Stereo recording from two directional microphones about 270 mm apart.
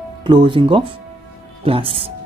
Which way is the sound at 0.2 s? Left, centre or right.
Centre.